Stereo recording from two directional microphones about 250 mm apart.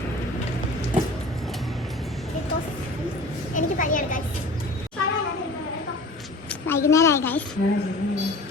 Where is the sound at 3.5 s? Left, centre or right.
Left.